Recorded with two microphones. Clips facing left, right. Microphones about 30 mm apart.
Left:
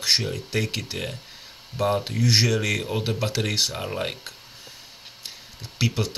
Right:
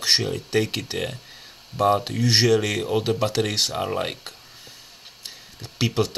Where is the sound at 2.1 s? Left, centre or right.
Right.